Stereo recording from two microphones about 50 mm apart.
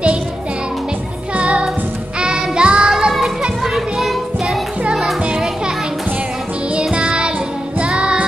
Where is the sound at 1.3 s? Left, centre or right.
Right.